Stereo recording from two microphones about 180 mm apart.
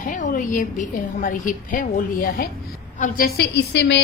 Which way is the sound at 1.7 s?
55° left (ahead or behind).